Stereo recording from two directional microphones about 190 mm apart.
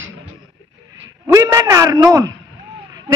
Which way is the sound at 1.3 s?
15° right (ahead or behind).